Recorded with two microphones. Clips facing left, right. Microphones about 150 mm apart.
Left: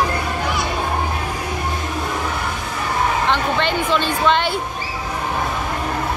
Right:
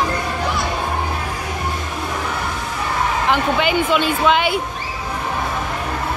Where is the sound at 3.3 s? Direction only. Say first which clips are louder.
Right 2 dB; 10° right (ahead or behind).